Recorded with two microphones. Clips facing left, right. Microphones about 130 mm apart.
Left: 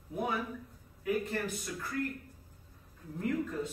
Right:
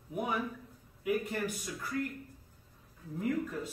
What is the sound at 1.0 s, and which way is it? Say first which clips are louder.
Speech: even; 10° right (ahead or behind).